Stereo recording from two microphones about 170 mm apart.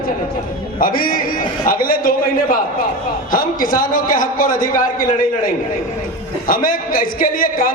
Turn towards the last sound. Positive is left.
turn(degrees=55)  # may be behind; listen again after turning